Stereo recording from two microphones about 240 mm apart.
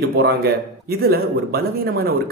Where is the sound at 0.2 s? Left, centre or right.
Right.